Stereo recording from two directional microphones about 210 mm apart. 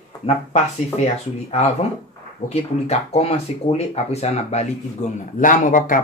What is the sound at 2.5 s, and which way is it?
Speech, 30° left (ahead or behind).